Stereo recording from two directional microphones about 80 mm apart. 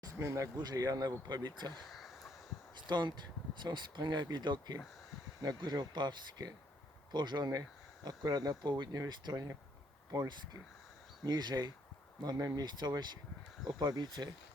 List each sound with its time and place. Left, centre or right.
0.2 s speech: right
0.6 s speech: right
1.9 s a sound: centre
2.8 s speech: right
12.5 s speech: right